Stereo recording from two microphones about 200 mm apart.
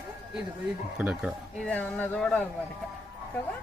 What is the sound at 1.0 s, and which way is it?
Speech, 5° right (ahead or behind).